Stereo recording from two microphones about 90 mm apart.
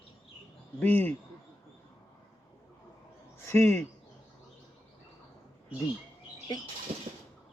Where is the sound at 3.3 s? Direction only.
30° left (ahead or behind).